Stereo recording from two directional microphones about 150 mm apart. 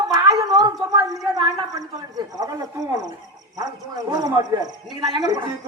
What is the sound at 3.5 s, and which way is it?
A man's voice, 25° right (ahead or behind).